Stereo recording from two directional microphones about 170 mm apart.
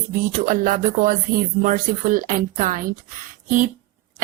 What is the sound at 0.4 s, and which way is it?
A woman's voice, 55° right (ahead or behind).